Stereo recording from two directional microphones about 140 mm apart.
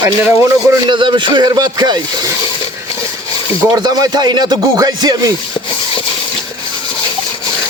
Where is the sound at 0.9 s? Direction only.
35° right (ahead or behind).